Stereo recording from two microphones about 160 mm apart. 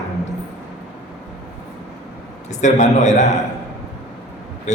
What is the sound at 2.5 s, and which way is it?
Speech, 50° left (ahead or behind).